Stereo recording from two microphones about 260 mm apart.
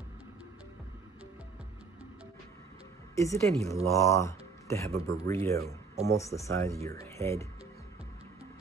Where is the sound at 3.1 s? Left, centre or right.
Centre.